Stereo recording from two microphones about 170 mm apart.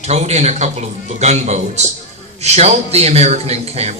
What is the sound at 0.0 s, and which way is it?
Speech, 40° right (ahead or behind).